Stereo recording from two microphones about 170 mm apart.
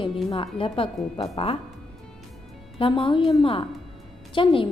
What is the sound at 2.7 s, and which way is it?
A woman's voice, 30° left (ahead or behind).